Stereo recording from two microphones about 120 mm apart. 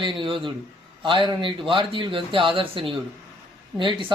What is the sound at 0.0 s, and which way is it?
Speech, 45° right (ahead or behind).